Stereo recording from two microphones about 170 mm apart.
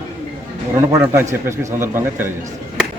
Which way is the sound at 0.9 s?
15° right (ahead or behind).